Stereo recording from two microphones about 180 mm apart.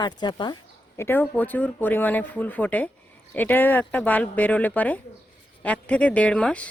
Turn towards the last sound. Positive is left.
turn(degrees=5)  # may be behind; listen again after turning